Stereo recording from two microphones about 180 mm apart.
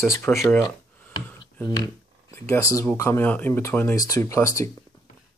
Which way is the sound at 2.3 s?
15° left (ahead or behind).